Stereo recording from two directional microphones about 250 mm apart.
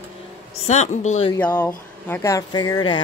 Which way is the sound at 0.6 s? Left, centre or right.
Left.